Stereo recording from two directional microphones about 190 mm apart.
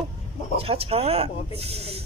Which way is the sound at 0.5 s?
30° right (ahead or behind).